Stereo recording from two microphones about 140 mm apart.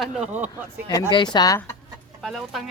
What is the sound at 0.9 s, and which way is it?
Speech, 25° left (ahead or behind).